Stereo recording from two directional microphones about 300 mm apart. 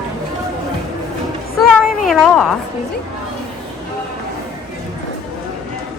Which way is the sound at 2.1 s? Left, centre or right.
Centre.